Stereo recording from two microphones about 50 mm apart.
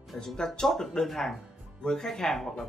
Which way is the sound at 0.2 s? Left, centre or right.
Centre.